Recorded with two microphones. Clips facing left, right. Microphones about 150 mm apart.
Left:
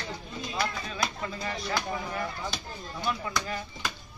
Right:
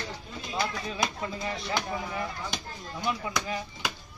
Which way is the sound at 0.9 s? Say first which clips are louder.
Right 1 dB; 20° right (ahead or behind).